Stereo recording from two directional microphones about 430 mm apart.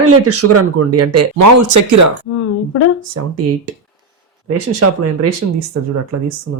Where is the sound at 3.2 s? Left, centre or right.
Right.